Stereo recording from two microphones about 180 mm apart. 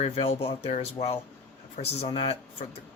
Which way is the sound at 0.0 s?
35° left (ahead or behind).